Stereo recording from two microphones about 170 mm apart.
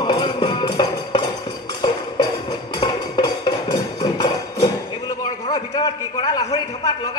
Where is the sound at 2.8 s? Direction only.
25° left (ahead or behind).